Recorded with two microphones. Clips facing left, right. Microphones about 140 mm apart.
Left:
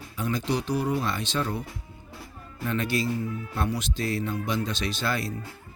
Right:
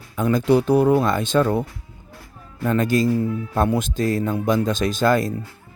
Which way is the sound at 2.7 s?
45° right (ahead or behind).